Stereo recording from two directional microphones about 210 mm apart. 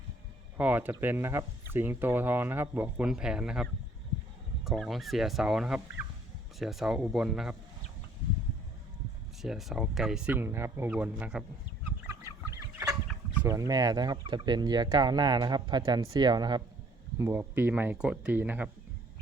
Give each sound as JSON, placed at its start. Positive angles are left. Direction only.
{"t": 0.5, "sound": "speech", "side_deg": -10}
{"t": 9.4, "sound": "speech", "side_deg": 0}
{"t": 13.3, "sound": "speech", "side_deg": -10}